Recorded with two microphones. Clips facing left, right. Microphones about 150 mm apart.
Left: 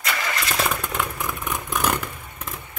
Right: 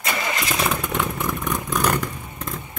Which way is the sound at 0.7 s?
Centre (ahead or behind).